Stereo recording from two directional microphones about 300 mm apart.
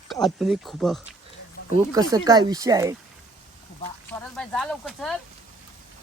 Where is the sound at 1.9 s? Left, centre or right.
Centre.